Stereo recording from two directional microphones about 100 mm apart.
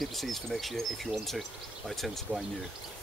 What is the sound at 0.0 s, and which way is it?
Speech, centre (ahead or behind).